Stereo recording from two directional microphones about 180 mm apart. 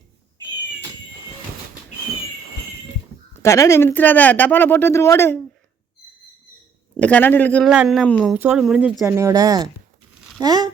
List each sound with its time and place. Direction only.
3.4 s speech: 15° left (ahead or behind)
6.9 s speech: 10° left (ahead or behind)
7.7 s speech: 5° right (ahead or behind)
8.3 s speech: 5° right (ahead or behind); by 10.7 s 20° right (ahead or behind)